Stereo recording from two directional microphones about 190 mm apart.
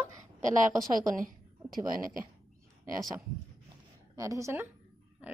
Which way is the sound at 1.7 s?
20° right (ahead or behind).